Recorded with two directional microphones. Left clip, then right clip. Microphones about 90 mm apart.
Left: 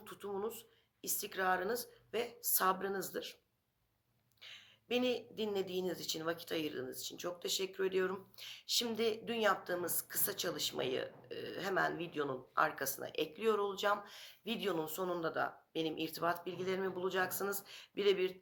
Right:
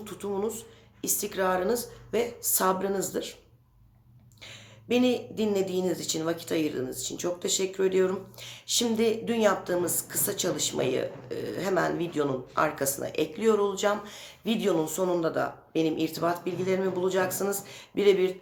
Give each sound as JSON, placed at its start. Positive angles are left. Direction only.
{"t": 0.0, "sound": "speech", "side_deg": -30}
{"t": 4.4, "sound": "speech", "side_deg": -35}